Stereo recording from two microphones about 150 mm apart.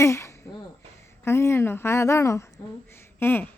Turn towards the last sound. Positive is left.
turn(degrees=15)  # may be behind; listen again after turning